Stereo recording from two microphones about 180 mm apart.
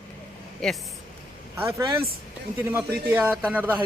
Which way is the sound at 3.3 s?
10° right (ahead or behind).